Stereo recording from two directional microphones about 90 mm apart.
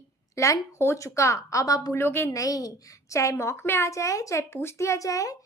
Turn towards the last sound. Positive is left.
turn(degrees=40)  # may be behind; listen again after turning